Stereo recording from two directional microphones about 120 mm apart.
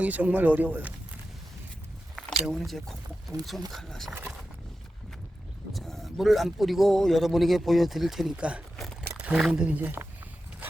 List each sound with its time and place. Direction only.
0.0 s speech: 15° right (ahead or behind)
2.1 s a sound: centre (ahead or behind)
3.7 s speech: centre (ahead or behind)
5.7 s speech: centre (ahead or behind); by 10.1 s 15° right (ahead or behind)